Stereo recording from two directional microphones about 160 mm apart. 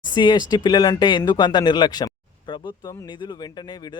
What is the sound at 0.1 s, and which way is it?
Speech, 25° left (ahead or behind).